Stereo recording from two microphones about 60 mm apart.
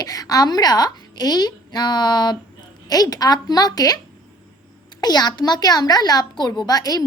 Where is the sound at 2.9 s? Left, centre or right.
Left.